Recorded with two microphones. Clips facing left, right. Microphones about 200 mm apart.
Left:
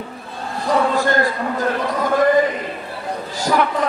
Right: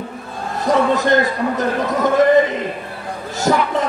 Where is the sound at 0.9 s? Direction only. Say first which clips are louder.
Right 2 dB; 20° right (ahead or behind).